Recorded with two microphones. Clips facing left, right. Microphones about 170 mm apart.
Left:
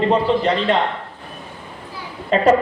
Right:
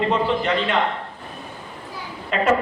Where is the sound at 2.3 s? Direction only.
35° left (ahead or behind).